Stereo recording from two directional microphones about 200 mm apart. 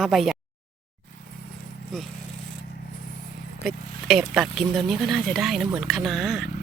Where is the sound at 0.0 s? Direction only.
Centre (ahead or behind).